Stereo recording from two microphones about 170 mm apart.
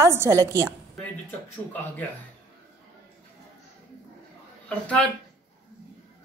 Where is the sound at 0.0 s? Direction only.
15° right (ahead or behind).